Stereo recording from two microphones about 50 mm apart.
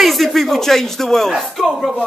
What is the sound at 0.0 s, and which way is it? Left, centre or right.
Speech, centre.